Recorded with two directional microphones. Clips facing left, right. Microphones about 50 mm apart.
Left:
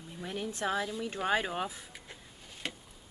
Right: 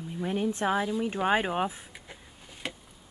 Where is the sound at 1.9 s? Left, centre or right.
Centre.